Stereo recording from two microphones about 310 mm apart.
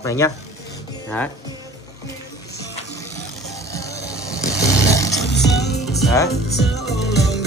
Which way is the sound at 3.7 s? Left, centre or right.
Centre.